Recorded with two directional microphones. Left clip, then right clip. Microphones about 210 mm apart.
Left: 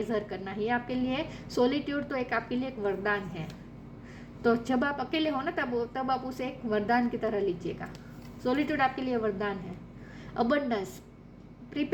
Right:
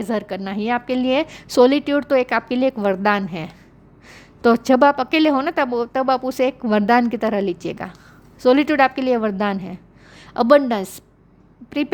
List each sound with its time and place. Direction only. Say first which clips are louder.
0.0 s a woman's voice: right 8 dB; 45° right (ahead or behind)
4.4 s a woman's voice: right 14 dB; 50° right (ahead or behind)